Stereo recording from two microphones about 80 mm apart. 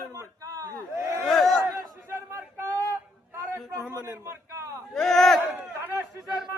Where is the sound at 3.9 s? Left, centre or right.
Left.